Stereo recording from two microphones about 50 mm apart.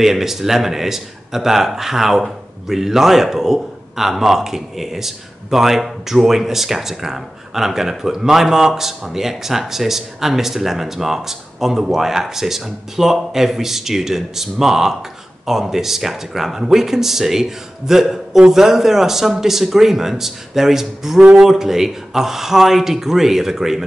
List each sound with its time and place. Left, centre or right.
0.0 s speech: centre